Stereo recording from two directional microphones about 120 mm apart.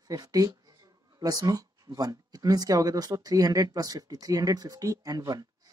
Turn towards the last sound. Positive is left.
turn(degrees=-30)  # may be behind; listen again after turning